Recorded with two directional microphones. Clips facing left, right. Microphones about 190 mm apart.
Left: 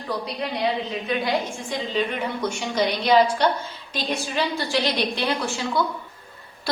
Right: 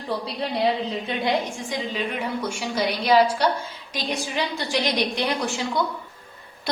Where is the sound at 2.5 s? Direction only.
10° right (ahead or behind).